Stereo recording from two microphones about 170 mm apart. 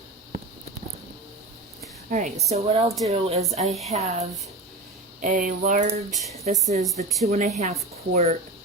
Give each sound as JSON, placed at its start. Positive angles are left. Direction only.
{"t": 2.0, "sound": "a woman's voice", "side_deg": -50}
{"t": 2.5, "sound": "speech", "side_deg": -35}
{"t": 3.7, "sound": "a woman's voice", "side_deg": 0}
{"t": 3.9, "sound": "speech", "side_deg": -40}
{"t": 5.2, "sound": "a sound", "side_deg": -50}
{"t": 6.4, "sound": "speech", "side_deg": -40}